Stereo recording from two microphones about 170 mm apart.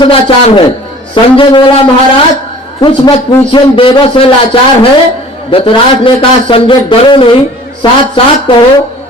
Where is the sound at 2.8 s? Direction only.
30° left (ahead or behind).